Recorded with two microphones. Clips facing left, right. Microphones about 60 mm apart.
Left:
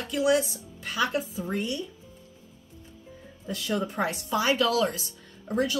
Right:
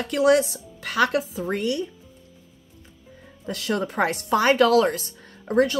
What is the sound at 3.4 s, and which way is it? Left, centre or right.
Speech, right.